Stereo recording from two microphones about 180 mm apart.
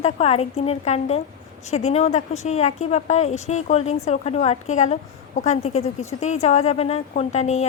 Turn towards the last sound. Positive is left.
turn(degrees=40)  # may be behind; listen again after turning